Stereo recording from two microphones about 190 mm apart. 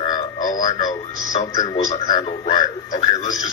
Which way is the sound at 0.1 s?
45° left (ahead or behind).